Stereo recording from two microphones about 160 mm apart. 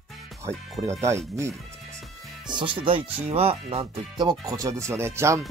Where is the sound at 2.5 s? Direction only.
30° right (ahead or behind).